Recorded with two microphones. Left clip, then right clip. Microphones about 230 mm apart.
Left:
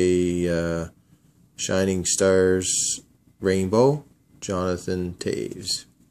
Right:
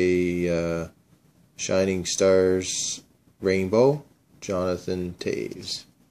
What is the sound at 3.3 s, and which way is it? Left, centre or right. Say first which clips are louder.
Speech: left 1 dB; centre.